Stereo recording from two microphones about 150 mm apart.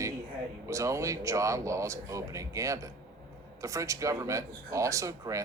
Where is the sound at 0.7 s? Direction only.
20° right (ahead or behind).